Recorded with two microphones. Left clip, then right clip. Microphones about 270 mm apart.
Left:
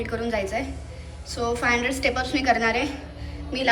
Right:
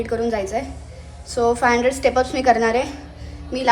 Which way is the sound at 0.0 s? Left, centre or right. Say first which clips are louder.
Right 5 dB; centre.